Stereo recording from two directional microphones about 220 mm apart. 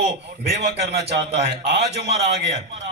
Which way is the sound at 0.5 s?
50° right (ahead or behind).